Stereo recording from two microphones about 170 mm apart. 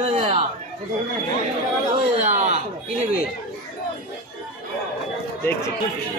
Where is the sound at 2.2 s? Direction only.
45° right (ahead or behind).